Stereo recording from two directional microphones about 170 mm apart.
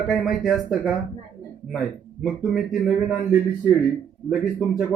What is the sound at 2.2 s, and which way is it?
Speech, 5° right (ahead or behind).